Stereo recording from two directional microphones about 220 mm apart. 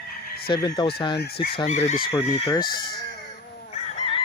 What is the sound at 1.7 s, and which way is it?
Speech, 30° left (ahead or behind).